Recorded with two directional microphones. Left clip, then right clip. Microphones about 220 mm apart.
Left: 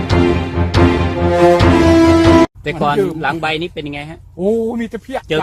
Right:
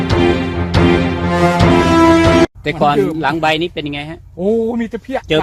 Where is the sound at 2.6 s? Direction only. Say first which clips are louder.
Right 2 dB; 45° right (ahead or behind).